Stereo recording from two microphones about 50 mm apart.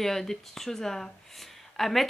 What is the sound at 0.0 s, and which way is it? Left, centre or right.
Speech, centre.